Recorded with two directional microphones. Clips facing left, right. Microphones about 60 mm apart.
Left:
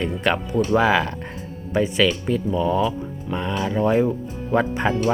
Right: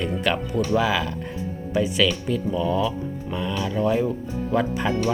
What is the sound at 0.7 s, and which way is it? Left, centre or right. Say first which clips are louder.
Speech: left 5 dB; left.